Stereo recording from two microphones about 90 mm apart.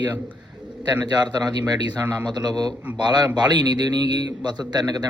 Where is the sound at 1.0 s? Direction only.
50° right (ahead or behind).